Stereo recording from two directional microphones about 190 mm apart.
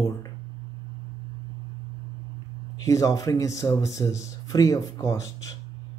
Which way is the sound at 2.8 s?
15° left (ahead or behind).